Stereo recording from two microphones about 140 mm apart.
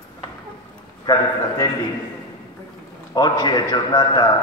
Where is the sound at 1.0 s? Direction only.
30° left (ahead or behind).